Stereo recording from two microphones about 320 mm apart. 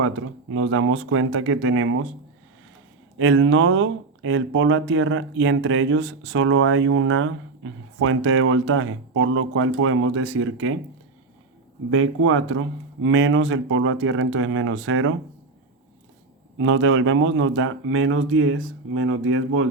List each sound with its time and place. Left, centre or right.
0.0 s speech: right
3.2 s speech: right
11.9 s speech: right
16.6 s speech: right